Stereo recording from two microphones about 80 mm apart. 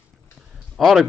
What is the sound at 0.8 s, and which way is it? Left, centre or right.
Speech, centre.